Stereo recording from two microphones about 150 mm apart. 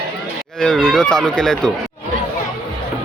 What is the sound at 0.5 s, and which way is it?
Speech, 5° left (ahead or behind).